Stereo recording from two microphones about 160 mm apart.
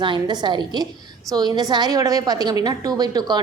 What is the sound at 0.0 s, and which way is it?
A woman's voice, 30° right (ahead or behind).